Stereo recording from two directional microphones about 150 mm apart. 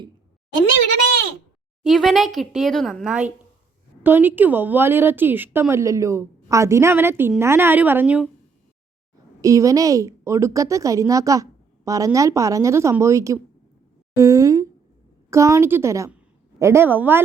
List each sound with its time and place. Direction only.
1.8 s a woman's voice: centre (ahead or behind)
9.4 s a woman's voice: 20° right (ahead or behind)